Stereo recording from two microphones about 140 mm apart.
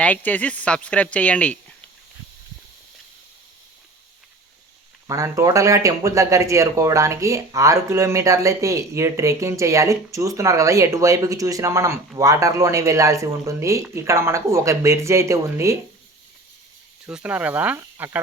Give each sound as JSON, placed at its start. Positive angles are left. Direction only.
{"t": 0.0, "sound": "speech", "side_deg": 10}
{"t": 5.0, "sound": "speech", "side_deg": -20}
{"t": 17.1, "sound": "speech", "side_deg": -10}